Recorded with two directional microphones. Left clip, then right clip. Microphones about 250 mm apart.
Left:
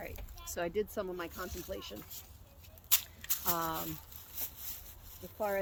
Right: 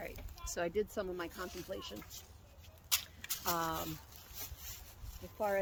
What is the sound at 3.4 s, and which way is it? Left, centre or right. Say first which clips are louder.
Speech: even; centre.